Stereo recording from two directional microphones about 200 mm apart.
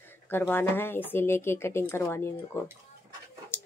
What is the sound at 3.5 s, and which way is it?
Dog, 10° left (ahead or behind).